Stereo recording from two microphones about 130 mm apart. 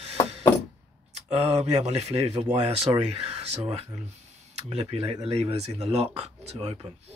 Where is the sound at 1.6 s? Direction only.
55° right (ahead or behind).